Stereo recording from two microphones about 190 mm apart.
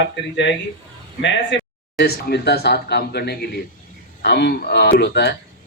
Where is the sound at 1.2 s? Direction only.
65° left (ahead or behind).